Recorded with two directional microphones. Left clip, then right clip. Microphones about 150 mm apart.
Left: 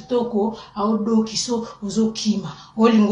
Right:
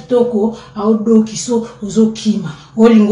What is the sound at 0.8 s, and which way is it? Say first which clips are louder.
Speech: right 8 dB; 20° right (ahead or behind).